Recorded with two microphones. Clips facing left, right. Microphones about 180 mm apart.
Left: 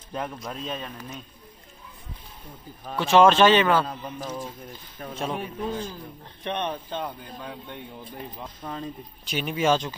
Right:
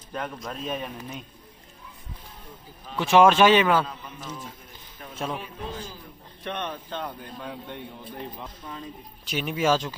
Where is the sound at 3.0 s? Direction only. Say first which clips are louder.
Even; 15° right (ahead or behind).